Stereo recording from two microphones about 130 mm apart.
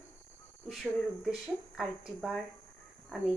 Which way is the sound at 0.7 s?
Centre (ahead or behind).